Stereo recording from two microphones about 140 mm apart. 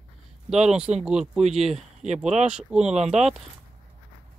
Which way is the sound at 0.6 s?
5° right (ahead or behind).